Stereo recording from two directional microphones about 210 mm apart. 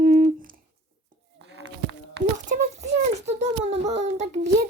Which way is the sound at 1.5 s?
55° right (ahead or behind).